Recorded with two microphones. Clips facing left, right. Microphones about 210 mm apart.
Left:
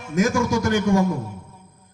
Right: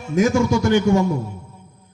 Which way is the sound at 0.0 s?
25° right (ahead or behind).